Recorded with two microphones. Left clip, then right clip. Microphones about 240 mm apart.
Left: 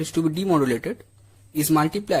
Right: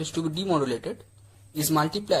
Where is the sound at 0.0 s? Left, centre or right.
Left.